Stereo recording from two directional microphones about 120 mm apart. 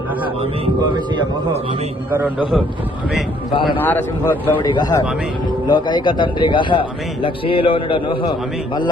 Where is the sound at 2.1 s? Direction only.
15° right (ahead or behind).